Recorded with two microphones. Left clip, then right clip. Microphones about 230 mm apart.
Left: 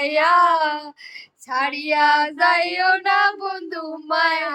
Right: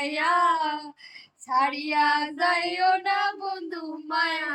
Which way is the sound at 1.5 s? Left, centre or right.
Centre.